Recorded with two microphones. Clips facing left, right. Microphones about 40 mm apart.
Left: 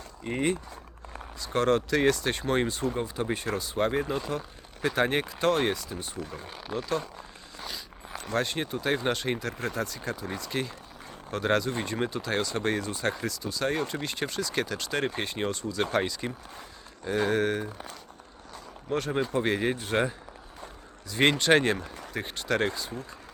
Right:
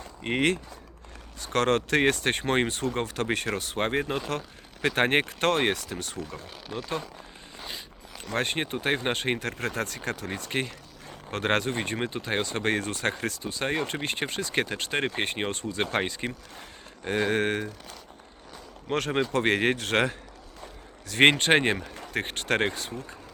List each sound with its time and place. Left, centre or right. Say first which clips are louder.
0.2 s speech: right 3 dB; right
1.5 s speech: right 1 dB; right
2.9 s speech: right 2 dB; right
6.1 s speech: even; centre
8.4 s speech: right 1 dB; right
11.9 s speech: even; right
13.1 s speech: right 1 dB; right
18.9 s speech: right 2 dB; right
21.2 s speech: right 3 dB; right
21.5 s speech: even; right
22.1 s speech: right 2 dB; right